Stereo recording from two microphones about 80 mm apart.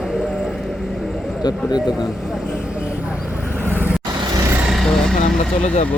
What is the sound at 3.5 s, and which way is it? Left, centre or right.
Vehicle, left.